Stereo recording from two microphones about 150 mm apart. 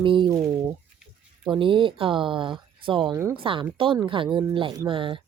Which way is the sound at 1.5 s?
35° right (ahead or behind).